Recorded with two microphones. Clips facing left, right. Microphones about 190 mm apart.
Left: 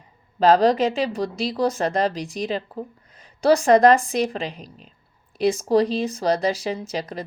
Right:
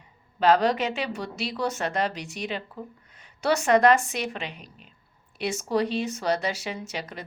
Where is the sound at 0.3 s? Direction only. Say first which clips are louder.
Left 5 dB; 35° left (ahead or behind).